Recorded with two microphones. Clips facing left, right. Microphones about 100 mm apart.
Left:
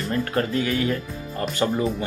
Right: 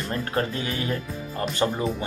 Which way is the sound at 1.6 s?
20° right (ahead or behind).